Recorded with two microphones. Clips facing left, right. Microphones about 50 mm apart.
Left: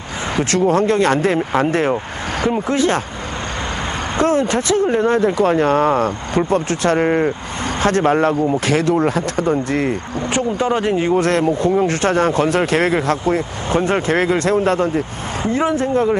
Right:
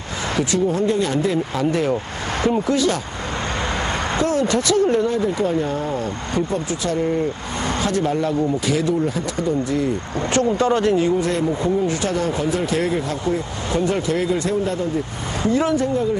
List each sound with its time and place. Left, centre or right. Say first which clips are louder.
0.5 s speech: left 6 dB; left
4.2 s speech: left 4 dB; left
5.0 s speech: left 5 dB; left
10.3 s speech: even; centre
11.1 s speech: left 5 dB; left
13.7 s speech: left 3 dB; left
15.4 s speech: left 1 dB; left